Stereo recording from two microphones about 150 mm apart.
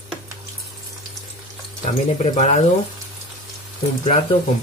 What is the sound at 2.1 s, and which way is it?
Speech, 50° left (ahead or behind).